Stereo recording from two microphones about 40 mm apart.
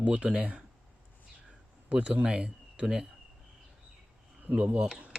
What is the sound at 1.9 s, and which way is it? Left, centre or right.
Speech, right.